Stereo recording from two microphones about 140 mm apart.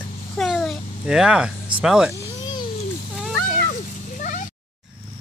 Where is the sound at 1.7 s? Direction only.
5° right (ahead or behind).